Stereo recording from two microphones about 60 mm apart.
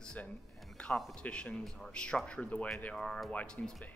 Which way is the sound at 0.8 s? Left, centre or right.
Centre.